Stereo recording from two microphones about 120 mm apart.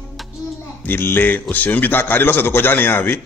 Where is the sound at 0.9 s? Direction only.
20° left (ahead or behind).